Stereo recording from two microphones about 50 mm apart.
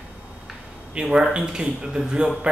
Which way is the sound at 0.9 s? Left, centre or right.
Centre.